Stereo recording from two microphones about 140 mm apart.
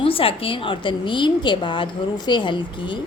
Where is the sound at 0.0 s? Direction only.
40° left (ahead or behind).